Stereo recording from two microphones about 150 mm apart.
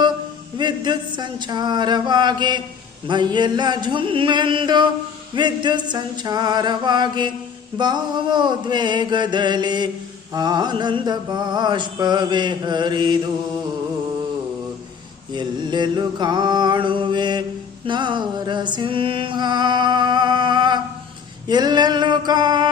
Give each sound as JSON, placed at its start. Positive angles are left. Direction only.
{"t": 0.5, "sound": "mantra", "side_deg": -30}
{"t": 3.1, "sound": "music", "side_deg": -30}
{"t": 5.3, "sound": "mantra", "side_deg": -30}
{"t": 15.3, "sound": "mantra", "side_deg": -30}
{"t": 17.8, "sound": "music", "side_deg": -30}
{"t": 21.4, "sound": "mantra", "side_deg": -30}